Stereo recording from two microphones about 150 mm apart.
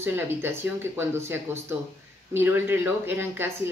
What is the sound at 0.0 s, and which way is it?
A woman's voice, 15° right (ahead or behind).